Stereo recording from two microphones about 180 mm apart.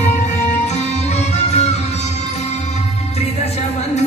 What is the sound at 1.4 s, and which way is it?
Music, 35° left (ahead or behind).